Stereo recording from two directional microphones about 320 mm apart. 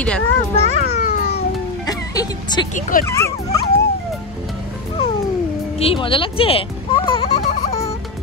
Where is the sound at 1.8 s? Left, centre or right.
Centre.